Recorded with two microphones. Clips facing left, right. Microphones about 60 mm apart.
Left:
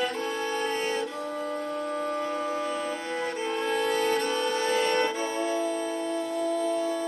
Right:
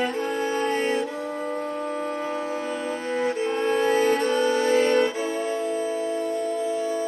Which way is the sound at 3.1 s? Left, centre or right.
Centre.